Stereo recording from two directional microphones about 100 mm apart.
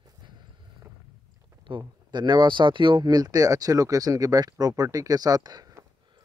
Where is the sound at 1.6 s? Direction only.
50° right (ahead or behind).